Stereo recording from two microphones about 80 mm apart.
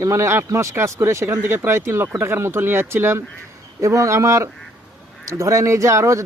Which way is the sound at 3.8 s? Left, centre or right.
Right.